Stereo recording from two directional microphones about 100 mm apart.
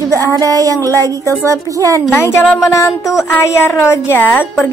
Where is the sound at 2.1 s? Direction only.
25° left (ahead or behind).